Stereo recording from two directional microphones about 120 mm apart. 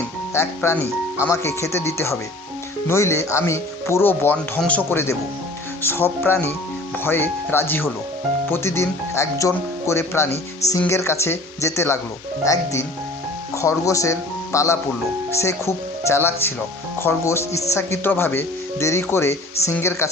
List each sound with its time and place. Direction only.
0.3 s speech: 20° left (ahead or behind)
13.5 s speech: 25° left (ahead or behind)